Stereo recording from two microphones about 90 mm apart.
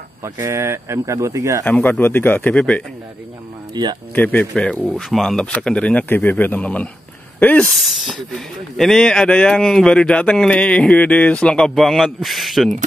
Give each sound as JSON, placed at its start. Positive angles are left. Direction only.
{"t": 0.2, "sound": "speech", "side_deg": -35}
{"t": 1.6, "sound": "speech", "side_deg": 20}
{"t": 3.8, "sound": "speech", "side_deg": -50}
{"t": 4.1, "sound": "speech", "side_deg": 20}
{"t": 7.8, "sound": "speech", "side_deg": -5}